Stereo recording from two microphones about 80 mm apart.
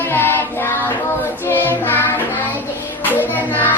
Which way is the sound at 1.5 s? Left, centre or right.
Left.